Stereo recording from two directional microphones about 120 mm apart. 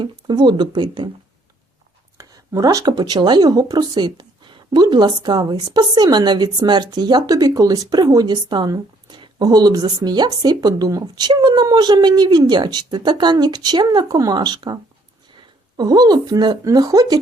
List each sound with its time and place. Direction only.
0.0 s speech: 40° right (ahead or behind)
2.1 s speech: 30° right (ahead or behind)
15.8 s speech: 35° right (ahead or behind)